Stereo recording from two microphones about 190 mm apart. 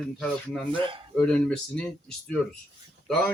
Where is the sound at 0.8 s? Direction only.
25° right (ahead or behind).